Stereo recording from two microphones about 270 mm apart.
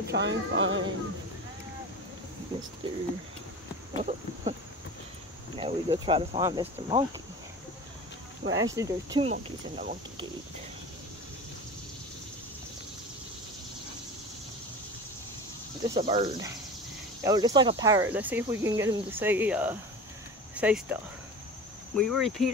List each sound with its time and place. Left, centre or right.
0.0 s a sound: right
2.8 s speech: centre
5.6 s speech: centre
8.7 s speech: centre
15.9 s speech: centre